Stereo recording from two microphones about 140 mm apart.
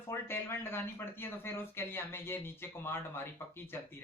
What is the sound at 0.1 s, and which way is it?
Speech, 15° left (ahead or behind).